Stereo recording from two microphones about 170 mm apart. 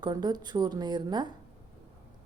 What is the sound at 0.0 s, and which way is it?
A woman's voice, 25° right (ahead or behind).